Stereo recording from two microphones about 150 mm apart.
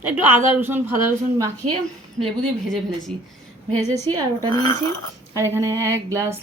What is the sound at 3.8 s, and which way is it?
Speech, 25° right (ahead or behind).